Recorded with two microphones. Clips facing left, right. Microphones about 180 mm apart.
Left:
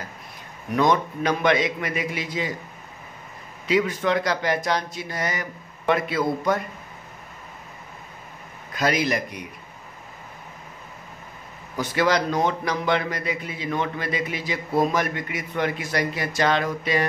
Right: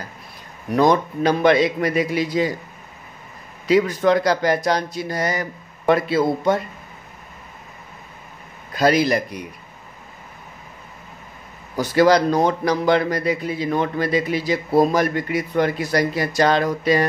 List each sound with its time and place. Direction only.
0.7 s a man's voice: 35° right (ahead or behind)
3.6 s a man's voice: 40° right (ahead or behind)
8.7 s a man's voice: 35° right (ahead or behind)
11.7 s a man's voice: 35° right (ahead or behind)